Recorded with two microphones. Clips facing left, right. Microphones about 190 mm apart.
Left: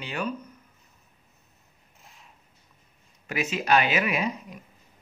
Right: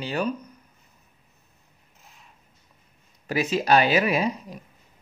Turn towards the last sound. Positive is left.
turn(degrees=-35)  # may be behind; listen again after turning